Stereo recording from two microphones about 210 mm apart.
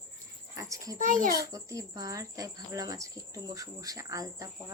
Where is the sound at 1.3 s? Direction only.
15° right (ahead or behind).